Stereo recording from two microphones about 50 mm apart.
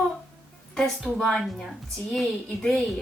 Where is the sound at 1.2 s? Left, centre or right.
Centre.